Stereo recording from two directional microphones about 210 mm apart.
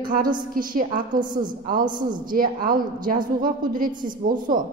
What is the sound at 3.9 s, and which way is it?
Speech, 20° right (ahead or behind).